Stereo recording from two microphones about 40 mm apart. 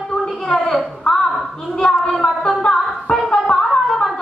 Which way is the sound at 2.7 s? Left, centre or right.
Centre.